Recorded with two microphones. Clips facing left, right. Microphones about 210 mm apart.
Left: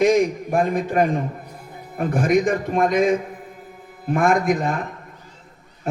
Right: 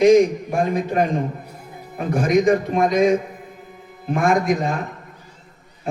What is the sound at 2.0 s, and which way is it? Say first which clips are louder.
A man's voice: right 1 dB; 50° left (ahead or behind).